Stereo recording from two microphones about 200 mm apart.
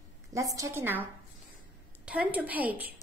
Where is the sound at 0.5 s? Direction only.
15° right (ahead or behind).